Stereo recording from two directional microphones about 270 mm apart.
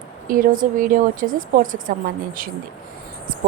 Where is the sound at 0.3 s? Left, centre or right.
Right.